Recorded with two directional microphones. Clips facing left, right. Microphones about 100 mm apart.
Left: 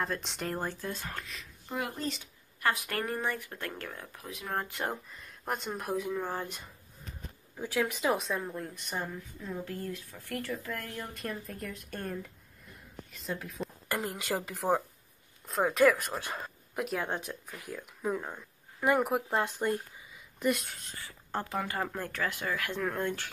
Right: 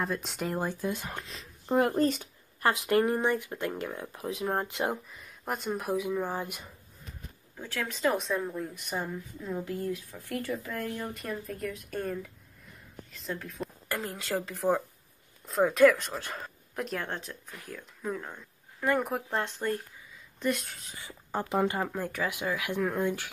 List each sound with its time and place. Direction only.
0.0 s speech: 5° right (ahead or behind)
0.6 s speech: 15° right (ahead or behind); by 1.9 s 35° right (ahead or behind)
1.9 s speech: 50° right (ahead or behind)
2.6 s speech: 25° right (ahead or behind)
5.1 s speech: centre (ahead or behind)
7.5 s speech: 10° left (ahead or behind)
8.1 s speech: centre (ahead or behind)
9.5 s speech: 15° right (ahead or behind)
11.1 s speech: centre (ahead or behind)
14.0 s speech: 15° left (ahead or behind)
15.4 s speech: centre (ahead or behind)
20.9 s speech: 15° right (ahead or behind)